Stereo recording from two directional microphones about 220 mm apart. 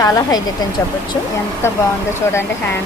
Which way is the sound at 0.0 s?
15° left (ahead or behind).